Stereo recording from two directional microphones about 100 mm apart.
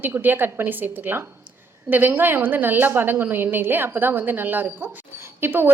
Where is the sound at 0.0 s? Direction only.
20° right (ahead or behind).